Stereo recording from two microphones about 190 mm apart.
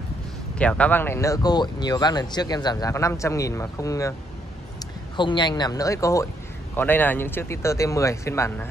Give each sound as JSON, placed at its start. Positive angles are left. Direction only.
{"t": 0.6, "sound": "speech", "side_deg": 5}
{"t": 5.1, "sound": "speech", "side_deg": 25}